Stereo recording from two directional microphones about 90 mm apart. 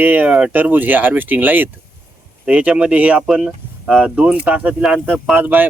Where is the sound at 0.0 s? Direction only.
20° right (ahead or behind).